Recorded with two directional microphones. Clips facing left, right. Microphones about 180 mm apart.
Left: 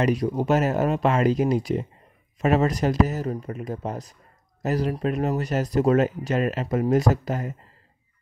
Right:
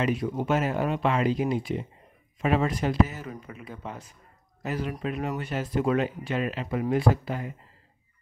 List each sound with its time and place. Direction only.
0.0 s speech: 40° left (ahead or behind)